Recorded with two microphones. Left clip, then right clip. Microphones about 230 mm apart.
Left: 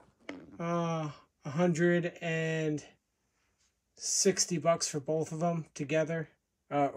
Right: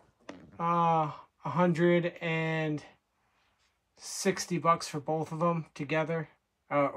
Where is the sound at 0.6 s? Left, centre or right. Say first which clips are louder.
Right 8 dB; centre.